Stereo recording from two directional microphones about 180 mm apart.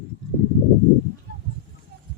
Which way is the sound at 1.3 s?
60° right (ahead or behind).